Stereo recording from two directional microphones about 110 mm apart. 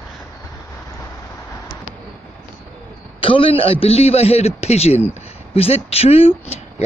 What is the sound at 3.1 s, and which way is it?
A man's voice, 55° left (ahead or behind).